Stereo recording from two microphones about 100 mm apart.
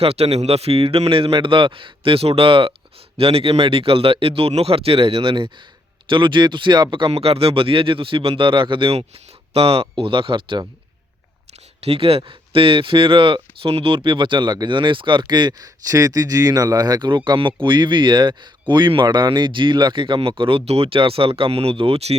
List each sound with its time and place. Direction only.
0.0 s a man's voice: 85° right; by 2.7 s 60° right (ahead or behind)
3.2 s a man's voice: 70° right (ahead or behind); by 7.2 s 55° right (ahead or behind)
7.2 s speech: 80° right
9.5 s a man's voice: 80° right
9.9 s speech: 60° right (ahead or behind)
11.8 s speech: 80° right